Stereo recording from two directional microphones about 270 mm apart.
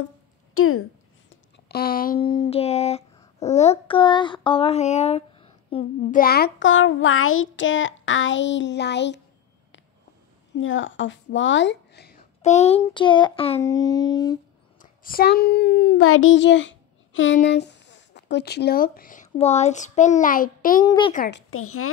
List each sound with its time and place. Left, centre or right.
0.6 s child singing: left
1.3 s a sound: left
2.1 s a sound: centre
6.1 s child singing: left
10.5 s speech: left
12.4 s child singing: left
14.8 s a child's voice: left
20.8 s child singing: centre
21.1 s child singing: left